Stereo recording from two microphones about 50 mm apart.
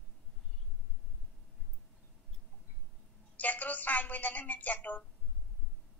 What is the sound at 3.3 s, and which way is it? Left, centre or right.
A woman's voice, left.